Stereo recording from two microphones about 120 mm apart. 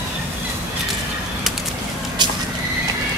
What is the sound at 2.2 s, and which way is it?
Horse, 40° right (ahead or behind).